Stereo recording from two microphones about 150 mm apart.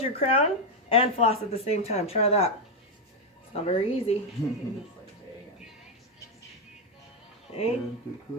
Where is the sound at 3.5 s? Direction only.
40° left (ahead or behind).